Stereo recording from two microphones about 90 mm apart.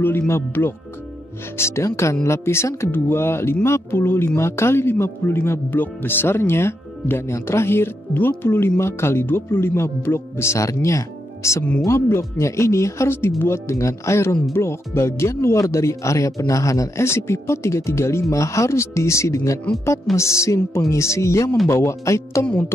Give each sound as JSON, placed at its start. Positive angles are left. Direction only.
{"t": 0.3, "sound": "a man's voice", "side_deg": 25}